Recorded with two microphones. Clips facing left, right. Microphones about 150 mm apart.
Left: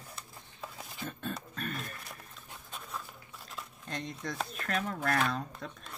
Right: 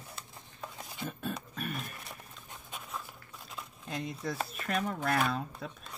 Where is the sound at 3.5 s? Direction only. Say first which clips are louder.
Right 1 dB; 5° right (ahead or behind).